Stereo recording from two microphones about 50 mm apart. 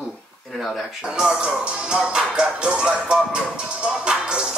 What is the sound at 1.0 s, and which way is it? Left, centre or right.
Speech, centre.